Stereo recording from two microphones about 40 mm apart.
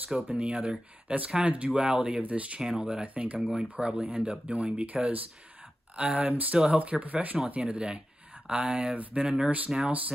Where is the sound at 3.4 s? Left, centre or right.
Centre.